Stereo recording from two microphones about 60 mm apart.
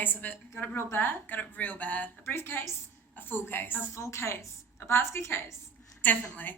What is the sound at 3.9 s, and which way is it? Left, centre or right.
A woman's voice, left.